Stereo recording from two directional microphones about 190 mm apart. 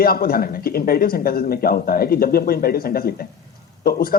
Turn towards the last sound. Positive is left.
turn(degrees=50)  # may be behind; listen again after turning